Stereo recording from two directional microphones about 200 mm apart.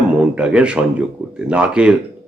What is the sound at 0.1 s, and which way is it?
A man's voice, 5° right (ahead or behind).